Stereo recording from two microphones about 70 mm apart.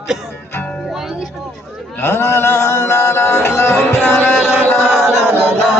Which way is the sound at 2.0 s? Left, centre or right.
Left.